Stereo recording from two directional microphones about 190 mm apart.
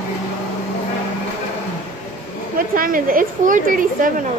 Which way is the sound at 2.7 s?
50° right (ahead or behind).